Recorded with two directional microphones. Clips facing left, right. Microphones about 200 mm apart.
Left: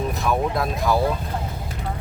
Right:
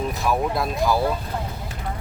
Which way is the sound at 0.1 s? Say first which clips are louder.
Even; centre (ahead or behind).